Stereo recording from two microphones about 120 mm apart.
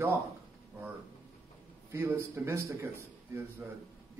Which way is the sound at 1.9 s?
20° right (ahead or behind).